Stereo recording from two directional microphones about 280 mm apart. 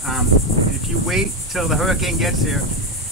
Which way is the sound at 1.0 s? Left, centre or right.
Centre.